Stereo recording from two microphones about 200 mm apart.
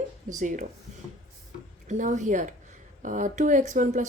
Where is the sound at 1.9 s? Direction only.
40° right (ahead or behind).